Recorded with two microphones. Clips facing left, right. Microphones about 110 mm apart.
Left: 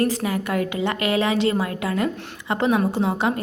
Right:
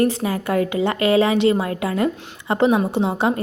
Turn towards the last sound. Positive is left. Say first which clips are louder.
# right 2 dB
turn(degrees=-30)  # may be behind; listen again after turning